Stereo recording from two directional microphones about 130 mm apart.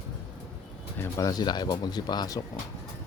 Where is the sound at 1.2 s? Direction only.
30° left (ahead or behind).